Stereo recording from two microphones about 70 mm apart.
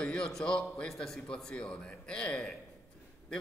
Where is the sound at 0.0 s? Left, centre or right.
Centre.